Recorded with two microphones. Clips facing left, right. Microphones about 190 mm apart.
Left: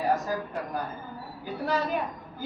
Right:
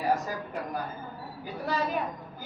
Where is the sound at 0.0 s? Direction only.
Centre (ahead or behind).